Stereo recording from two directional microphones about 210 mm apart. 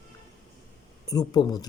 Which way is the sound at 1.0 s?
15° left (ahead or behind).